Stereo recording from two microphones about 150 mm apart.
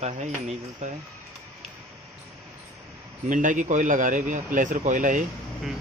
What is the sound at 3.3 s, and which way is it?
A man's voice, 60° right (ahead or behind).